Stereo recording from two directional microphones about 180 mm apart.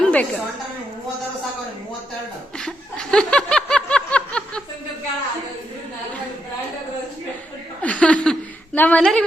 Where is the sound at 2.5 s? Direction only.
5° left (ahead or behind).